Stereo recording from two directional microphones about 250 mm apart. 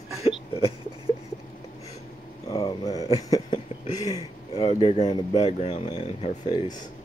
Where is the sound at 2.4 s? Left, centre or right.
Centre.